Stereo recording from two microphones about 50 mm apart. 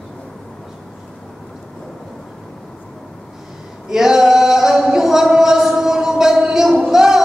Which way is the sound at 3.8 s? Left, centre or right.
Centre.